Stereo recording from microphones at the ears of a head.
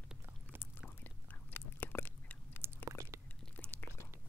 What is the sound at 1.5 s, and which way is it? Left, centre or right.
Chewing, left.